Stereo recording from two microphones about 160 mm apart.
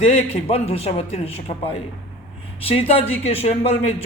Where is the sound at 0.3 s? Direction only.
40° left (ahead or behind).